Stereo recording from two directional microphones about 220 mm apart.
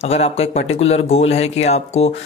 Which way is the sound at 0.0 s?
30° left (ahead or behind).